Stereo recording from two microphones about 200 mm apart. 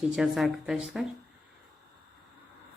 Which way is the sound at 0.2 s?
Centre (ahead or behind).